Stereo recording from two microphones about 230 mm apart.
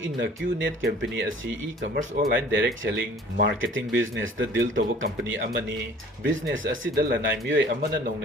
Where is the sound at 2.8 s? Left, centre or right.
Right.